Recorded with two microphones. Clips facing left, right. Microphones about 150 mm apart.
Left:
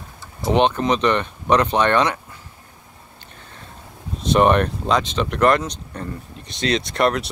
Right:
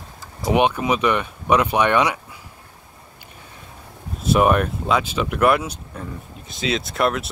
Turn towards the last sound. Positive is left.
turn(degrees=0)  # may be behind; listen again after turning